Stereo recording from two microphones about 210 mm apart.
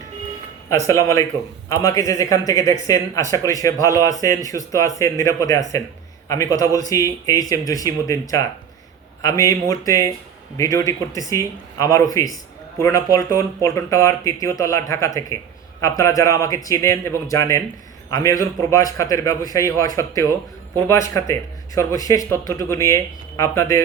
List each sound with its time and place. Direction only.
0.7 s a man's voice: 15° left (ahead or behind)